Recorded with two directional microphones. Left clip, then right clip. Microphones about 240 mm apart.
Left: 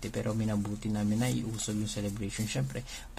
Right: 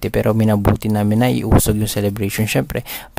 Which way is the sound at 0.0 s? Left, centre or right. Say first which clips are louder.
Right 18 dB; right.